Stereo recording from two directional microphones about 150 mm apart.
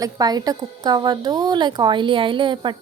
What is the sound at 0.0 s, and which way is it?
A woman's voice, 25° right (ahead or behind).